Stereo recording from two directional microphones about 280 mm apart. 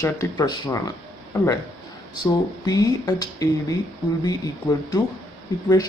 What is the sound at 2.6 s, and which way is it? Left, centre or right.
Speech, centre.